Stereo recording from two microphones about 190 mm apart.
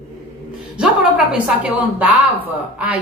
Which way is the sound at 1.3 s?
5° right (ahead or behind).